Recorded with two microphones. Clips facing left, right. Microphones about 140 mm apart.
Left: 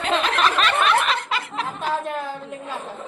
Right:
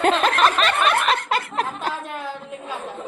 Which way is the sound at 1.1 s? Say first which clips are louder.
Right 3 dB; 50° right (ahead or behind).